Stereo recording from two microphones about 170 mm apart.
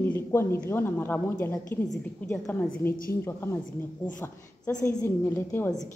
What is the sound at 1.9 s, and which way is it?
A man's voice, 5° left (ahead or behind).